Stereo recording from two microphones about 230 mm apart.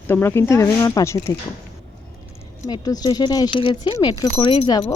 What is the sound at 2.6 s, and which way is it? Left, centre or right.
Speech, centre.